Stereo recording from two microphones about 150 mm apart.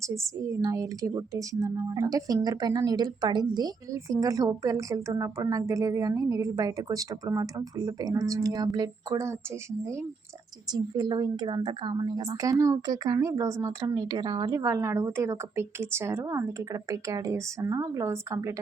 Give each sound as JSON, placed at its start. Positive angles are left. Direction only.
{"t": 0.0, "sound": "a woman's voice", "side_deg": -20}
{"t": 10.7, "sound": "a woman's voice", "side_deg": -25}
{"t": 14.6, "sound": "a woman's voice", "side_deg": -15}